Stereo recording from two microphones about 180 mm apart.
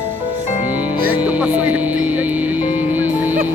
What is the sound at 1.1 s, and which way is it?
Music, 10° right (ahead or behind).